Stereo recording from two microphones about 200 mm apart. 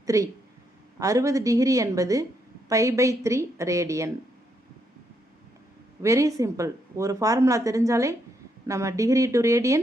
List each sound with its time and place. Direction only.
0.0 s speech: 15° right (ahead or behind)
6.0 s speech: 15° right (ahead or behind)